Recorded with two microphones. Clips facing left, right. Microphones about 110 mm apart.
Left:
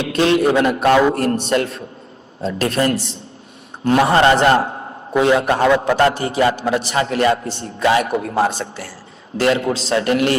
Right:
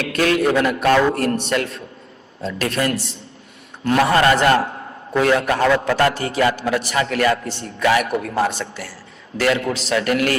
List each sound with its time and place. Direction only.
0.0 s a man's voice: 25° left (ahead or behind)